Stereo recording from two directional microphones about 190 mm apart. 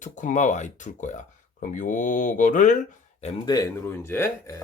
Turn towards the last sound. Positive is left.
turn(degrees=10)  # may be behind; listen again after turning